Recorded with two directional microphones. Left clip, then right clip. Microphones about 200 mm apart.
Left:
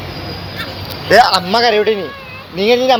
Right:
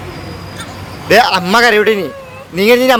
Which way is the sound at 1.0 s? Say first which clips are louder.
Even; 50° right (ahead or behind).